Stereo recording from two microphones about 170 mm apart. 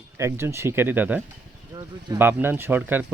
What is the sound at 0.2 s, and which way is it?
Speech, 15° right (ahead or behind).